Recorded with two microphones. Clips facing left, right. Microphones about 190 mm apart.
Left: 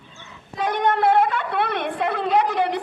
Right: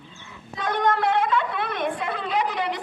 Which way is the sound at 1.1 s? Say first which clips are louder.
Left 3 dB; 60° left (ahead or behind).